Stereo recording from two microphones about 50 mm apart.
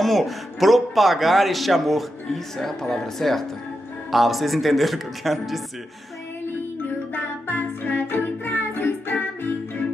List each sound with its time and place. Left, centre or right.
0.0 s a man's voice: centre
7.4 s music: left